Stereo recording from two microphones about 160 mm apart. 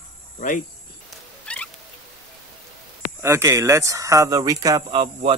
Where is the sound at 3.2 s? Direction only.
15° right (ahead or behind).